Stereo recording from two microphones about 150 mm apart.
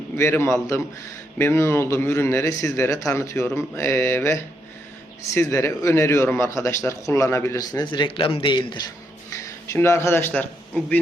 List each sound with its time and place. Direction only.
0.2 s a man's voice: 15° left (ahead or behind); by 8.8 s 30° left (ahead or behind)
9.3 s speech: 20° left (ahead or behind)